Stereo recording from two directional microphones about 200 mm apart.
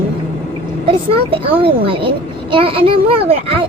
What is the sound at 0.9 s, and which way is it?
A child's voice, 25° right (ahead or behind).